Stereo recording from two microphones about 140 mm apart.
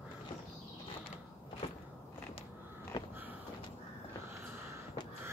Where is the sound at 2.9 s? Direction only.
30° left (ahead or behind).